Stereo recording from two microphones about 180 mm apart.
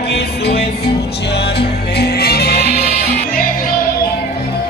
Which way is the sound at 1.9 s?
65° left (ahead or behind).